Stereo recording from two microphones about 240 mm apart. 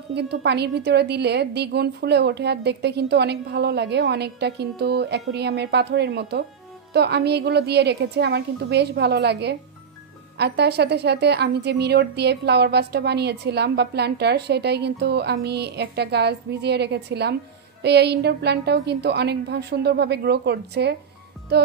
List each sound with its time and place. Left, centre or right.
0.1 s a woman's voice: right